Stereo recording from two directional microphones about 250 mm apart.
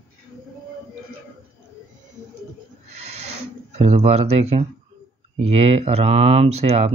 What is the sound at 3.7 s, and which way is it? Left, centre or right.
Speech, right.